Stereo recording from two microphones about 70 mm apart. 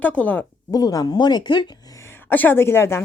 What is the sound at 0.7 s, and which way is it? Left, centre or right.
Speech, left.